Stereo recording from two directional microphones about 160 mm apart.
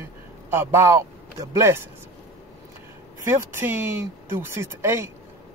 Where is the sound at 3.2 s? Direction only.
10° right (ahead or behind).